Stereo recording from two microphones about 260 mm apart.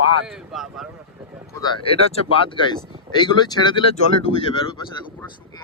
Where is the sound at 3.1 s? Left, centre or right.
Centre.